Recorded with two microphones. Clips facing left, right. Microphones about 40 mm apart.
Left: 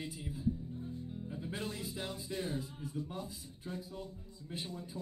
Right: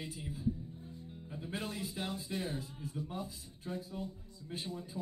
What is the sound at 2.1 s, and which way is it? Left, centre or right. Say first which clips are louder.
Speech: even; centre.